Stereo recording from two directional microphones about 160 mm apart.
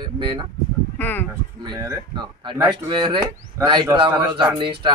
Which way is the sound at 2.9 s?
30° right (ahead or behind).